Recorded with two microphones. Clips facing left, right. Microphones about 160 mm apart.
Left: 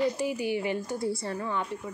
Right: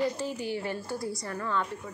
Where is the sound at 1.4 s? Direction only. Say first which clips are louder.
Right 4 dB; 15° left (ahead or behind).